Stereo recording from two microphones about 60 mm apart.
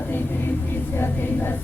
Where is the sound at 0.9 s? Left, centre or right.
Left.